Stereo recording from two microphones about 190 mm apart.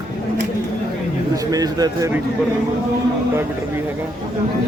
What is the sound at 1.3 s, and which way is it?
Speech, 20° right (ahead or behind).